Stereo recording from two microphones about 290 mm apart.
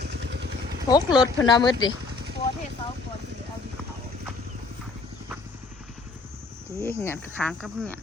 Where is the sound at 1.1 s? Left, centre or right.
Centre.